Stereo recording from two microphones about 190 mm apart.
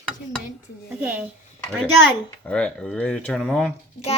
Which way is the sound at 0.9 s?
10° right (ahead or behind).